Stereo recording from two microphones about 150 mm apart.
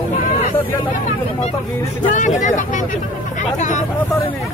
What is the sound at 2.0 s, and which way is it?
Speech, 55° left (ahead or behind).